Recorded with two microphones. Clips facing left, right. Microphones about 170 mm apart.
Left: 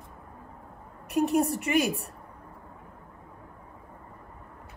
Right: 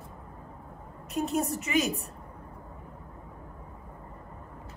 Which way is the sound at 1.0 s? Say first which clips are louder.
Left 5 dB; 65° left (ahead or behind).